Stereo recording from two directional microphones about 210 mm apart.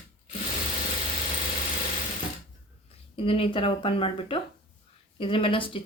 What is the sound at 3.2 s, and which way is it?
Speech, 25° left (ahead or behind).